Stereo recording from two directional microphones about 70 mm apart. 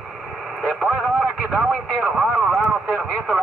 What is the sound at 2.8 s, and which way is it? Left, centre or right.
Radio, right.